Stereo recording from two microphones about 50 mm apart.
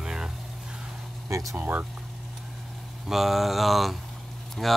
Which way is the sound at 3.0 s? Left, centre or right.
Centre.